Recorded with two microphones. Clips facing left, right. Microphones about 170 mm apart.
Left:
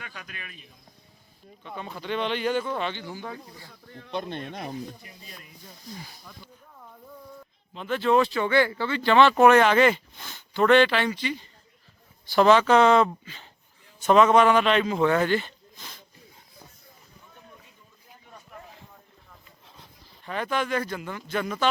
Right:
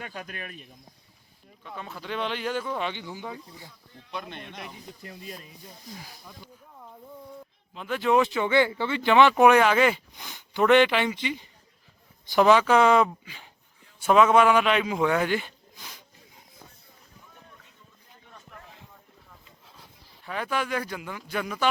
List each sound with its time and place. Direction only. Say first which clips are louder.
0.0 s speech: right 5 dB; 40° right (ahead or behind)
1.6 s speech: left 3 dB; centre (ahead or behind); by 3.7 s 15° right (ahead or behind)
4.1 s speech: left 6 dB; 35° left (ahead or behind)
5.9 s speech: left 3 dB; 10° right (ahead or behind)
7.7 s a man's voice: left 1 dB; 5° right (ahead or behind)
20.2 s speech: left 2 dB; 5° right (ahead or behind)